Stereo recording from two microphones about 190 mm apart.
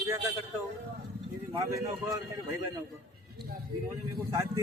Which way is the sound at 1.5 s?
15° right (ahead or behind).